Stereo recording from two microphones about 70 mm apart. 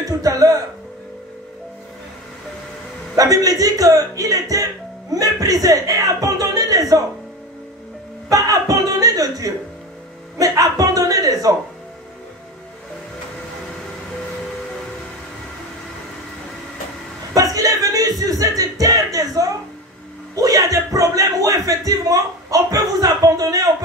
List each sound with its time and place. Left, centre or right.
0.0 s music: right
3.2 s speech: right
8.3 s chuckle: right
10.4 s music: right
17.3 s a sound: right